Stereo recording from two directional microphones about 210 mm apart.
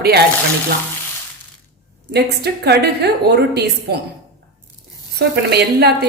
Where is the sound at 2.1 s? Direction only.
50° right (ahead or behind).